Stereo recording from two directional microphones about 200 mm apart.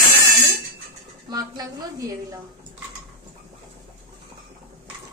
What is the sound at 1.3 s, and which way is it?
Speech, 20° right (ahead or behind).